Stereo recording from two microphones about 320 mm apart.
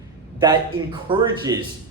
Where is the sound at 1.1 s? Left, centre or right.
Centre.